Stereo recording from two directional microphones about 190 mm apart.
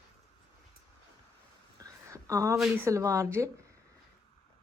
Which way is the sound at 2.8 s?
15° right (ahead or behind).